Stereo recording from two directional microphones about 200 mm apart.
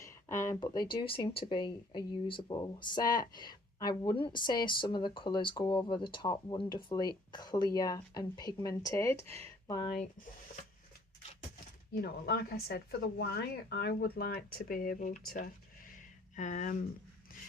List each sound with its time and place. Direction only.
0.0 s a sound: 15° left (ahead or behind)
1.0 s speech: 25° left (ahead or behind)
11.9 s speech: 50° left (ahead or behind)
16.3 s speech: 40° left (ahead or behind)